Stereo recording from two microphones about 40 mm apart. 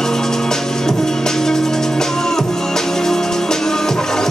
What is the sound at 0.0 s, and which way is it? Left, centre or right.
Music, centre.